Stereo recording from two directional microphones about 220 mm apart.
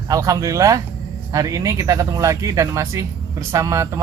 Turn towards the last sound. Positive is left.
turn(degrees=-15)  # may be behind; listen again after turning